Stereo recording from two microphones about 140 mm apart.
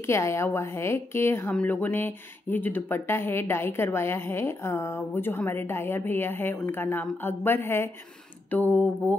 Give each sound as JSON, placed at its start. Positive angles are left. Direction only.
{"t": 0.0, "sound": "speech", "side_deg": 20}